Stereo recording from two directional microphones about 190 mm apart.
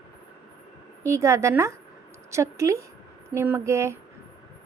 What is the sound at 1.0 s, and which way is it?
A woman's voice, 15° right (ahead or behind).